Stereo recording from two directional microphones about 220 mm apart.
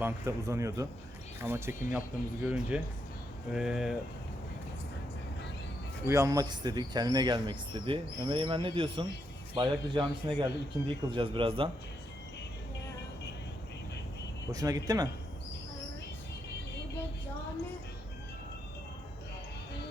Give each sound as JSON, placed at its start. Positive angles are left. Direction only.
{"t": 0.0, "sound": "speech", "side_deg": -15}
{"t": 6.1, "sound": "speech", "side_deg": -15}
{"t": 14.5, "sound": "speech", "side_deg": -15}